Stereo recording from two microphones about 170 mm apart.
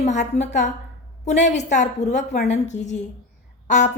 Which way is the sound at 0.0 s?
45° left (ahead or behind).